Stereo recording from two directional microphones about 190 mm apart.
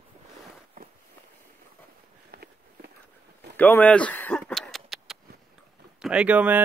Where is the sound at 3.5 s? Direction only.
10° left (ahead or behind).